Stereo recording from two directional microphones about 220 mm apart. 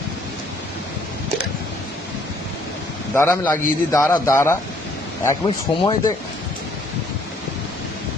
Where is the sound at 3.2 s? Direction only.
10° left (ahead or behind).